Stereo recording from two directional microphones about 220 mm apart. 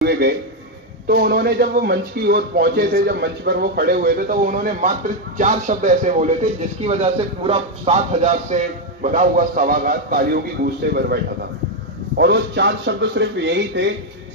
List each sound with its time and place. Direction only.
1.0 s a man's voice: 45° right (ahead or behind)
12.2 s a man's voice: 50° right (ahead or behind)